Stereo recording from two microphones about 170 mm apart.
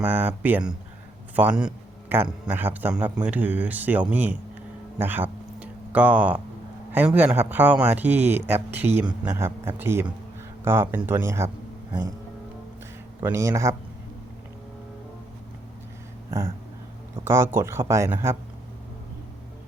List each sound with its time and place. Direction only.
0.0 s a man's voice: 10° right (ahead or behind)
4.9 s a sound: 10° right (ahead or behind)
6.9 s speech: 10° right (ahead or behind)
13.2 s speech: 15° right (ahead or behind)
17.2 s speech: 15° right (ahead or behind)